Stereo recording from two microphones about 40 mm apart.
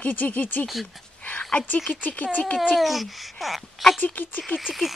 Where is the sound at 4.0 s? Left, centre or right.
Left.